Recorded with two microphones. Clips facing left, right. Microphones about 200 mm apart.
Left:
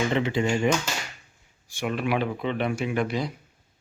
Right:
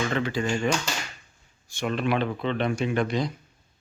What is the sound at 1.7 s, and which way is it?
Speech, 10° left (ahead or behind).